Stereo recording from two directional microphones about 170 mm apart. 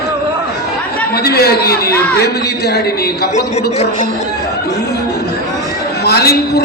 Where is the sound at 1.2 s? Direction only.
65° left (ahead or behind).